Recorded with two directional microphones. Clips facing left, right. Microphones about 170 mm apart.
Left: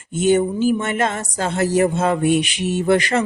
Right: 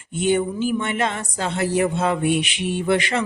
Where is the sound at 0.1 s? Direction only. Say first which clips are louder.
Left 4 dB; 40° left (ahead or behind).